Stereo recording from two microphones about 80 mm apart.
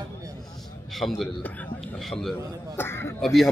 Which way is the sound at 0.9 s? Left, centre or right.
Centre.